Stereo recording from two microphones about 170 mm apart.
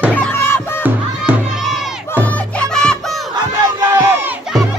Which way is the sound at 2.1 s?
10° left (ahead or behind).